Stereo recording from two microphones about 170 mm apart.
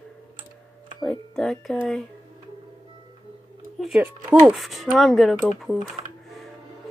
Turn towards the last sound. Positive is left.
turn(degrees=5)  # may be behind; listen again after turning